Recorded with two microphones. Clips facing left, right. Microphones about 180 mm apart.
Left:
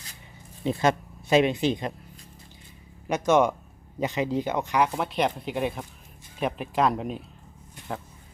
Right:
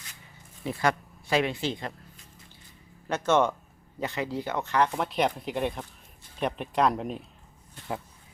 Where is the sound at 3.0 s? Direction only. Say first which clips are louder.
Left 3 dB; 15° left (ahead or behind).